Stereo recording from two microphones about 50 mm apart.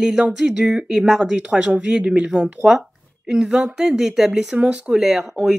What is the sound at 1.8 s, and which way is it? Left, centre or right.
Speech, right.